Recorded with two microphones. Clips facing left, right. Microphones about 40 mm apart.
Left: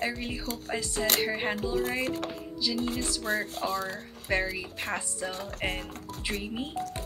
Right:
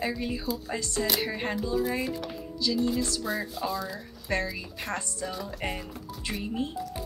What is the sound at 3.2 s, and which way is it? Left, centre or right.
Speech, left.